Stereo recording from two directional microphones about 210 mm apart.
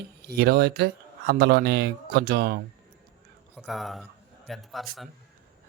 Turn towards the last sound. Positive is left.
turn(degrees=0)  # may be behind; listen again after turning